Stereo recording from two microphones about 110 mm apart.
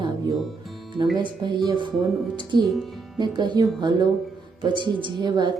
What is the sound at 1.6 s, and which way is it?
A woman's voice, 45° right (ahead or behind).